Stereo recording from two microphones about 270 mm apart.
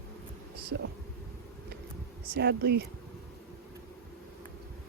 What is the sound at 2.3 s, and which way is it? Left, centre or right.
Speech, right.